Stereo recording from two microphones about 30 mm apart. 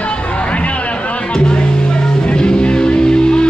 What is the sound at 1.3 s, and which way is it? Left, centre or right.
Music, left.